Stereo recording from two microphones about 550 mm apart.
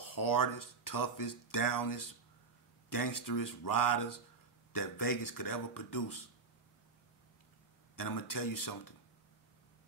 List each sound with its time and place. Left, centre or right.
0.0 s speech: left
7.9 s speech: left